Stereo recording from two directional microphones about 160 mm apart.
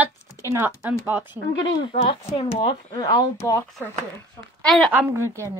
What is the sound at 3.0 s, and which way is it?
Speech, 20° left (ahead or behind).